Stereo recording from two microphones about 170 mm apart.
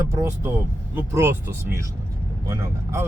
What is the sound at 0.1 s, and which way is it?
Speech, 15° right (ahead or behind).